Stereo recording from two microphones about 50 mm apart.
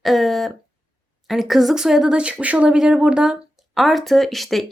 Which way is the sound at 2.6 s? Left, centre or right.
Centre.